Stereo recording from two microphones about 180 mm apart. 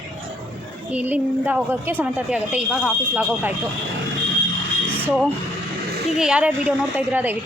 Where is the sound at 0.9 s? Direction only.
10° right (ahead or behind).